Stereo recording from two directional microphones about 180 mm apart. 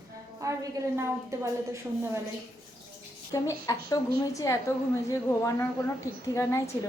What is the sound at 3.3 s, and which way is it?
A woman's voice, 20° left (ahead or behind).